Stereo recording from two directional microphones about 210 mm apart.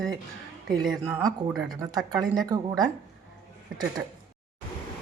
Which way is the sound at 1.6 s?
20° right (ahead or behind).